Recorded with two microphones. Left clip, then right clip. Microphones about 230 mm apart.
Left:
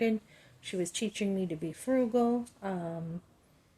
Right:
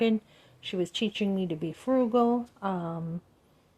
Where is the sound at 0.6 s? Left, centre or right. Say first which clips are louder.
Right 4 dB; centre.